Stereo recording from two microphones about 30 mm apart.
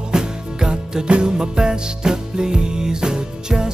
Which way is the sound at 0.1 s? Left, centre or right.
Right.